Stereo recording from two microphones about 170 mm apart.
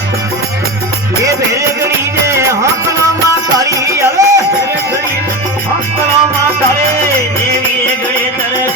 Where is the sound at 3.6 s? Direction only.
20° right (ahead or behind).